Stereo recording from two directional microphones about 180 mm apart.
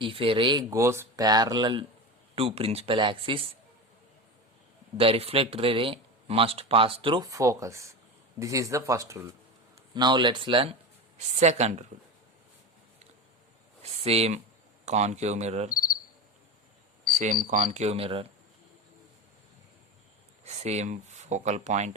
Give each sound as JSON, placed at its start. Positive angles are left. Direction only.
{"t": 0.0, "sound": "speech", "side_deg": -30}
{"t": 4.9, "sound": "speech", "side_deg": -30}
{"t": 11.3, "sound": "speech", "side_deg": -40}
{"t": 14.0, "sound": "speech", "side_deg": -35}
{"t": 17.4, "sound": "speech", "side_deg": -45}
{"t": 17.7, "sound": "speech", "side_deg": -35}
{"t": 20.4, "sound": "speech", "side_deg": -35}